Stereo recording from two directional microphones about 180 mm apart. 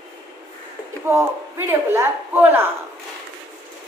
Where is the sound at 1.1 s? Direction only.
15° right (ahead or behind).